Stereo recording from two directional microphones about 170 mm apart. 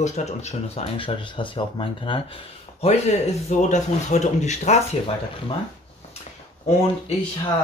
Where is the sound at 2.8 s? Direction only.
40° left (ahead or behind).